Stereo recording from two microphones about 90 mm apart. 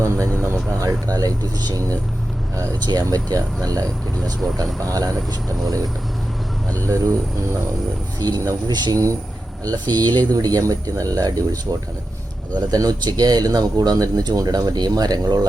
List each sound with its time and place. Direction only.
0.8 s speech: 40° right (ahead or behind)
2.8 s speech: 45° right (ahead or behind)
4.2 s speech: centre (ahead or behind)
4.5 s speech: 40° right (ahead or behind)
8.2 s speech: 45° right (ahead or behind)
12.5 s speech: 45° right (ahead or behind)